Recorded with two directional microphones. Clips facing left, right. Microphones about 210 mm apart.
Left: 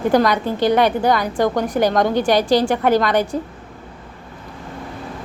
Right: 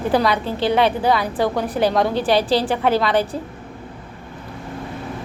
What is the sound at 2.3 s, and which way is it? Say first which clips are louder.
Speech: left 2 dB; 30° right (ahead or behind).